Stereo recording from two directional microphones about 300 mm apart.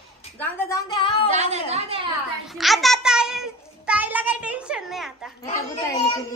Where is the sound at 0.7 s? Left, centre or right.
Centre.